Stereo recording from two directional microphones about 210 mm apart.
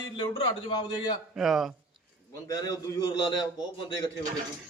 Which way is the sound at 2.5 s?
20° left (ahead or behind).